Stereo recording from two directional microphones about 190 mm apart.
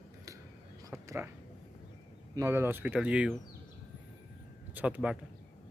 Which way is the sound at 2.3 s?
15° right (ahead or behind).